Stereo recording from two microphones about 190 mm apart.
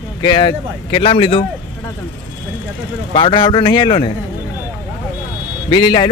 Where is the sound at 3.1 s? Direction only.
25° left (ahead or behind).